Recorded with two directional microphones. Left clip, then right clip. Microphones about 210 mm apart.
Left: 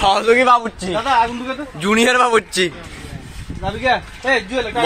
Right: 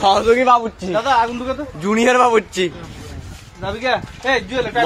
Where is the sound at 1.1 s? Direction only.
20° right (ahead or behind).